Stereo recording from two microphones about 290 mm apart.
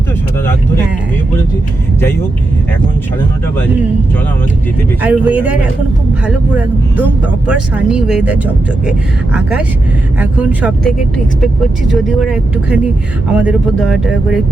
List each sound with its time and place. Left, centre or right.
5.0 s speech: centre